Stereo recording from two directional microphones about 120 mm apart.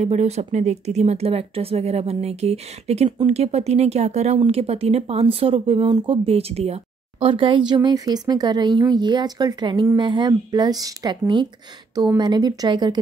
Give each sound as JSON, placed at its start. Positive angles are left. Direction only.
{"t": 0.0, "sound": "speech", "side_deg": -65}
{"t": 4.5, "sound": "speech", "side_deg": -55}